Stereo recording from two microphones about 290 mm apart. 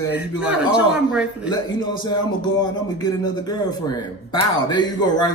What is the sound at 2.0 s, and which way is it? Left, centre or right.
A man's voice, centre.